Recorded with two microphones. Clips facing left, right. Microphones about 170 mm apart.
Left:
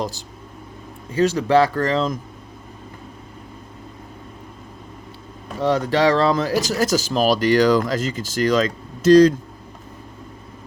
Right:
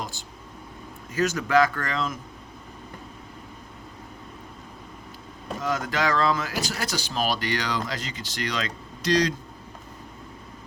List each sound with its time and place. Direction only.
0.0 s speech: 40° left (ahead or behind)
5.5 s speech: 35° left (ahead or behind)